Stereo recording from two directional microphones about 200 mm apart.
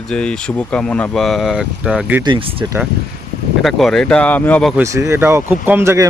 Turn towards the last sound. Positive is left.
turn(degrees=-15)  # may be behind; listen again after turning